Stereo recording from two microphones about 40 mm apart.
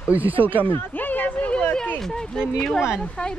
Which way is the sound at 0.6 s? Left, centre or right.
Left.